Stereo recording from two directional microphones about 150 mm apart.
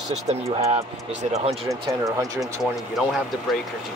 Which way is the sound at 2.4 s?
Centre (ahead or behind).